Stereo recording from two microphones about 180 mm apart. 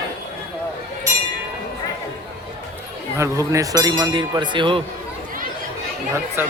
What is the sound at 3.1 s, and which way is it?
Speech, 15° right (ahead or behind).